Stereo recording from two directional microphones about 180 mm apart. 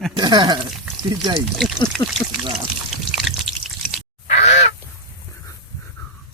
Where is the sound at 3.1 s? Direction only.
Centre (ahead or behind).